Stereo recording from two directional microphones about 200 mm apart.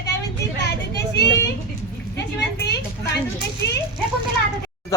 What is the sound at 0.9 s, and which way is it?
Vehicle, 55° left (ahead or behind).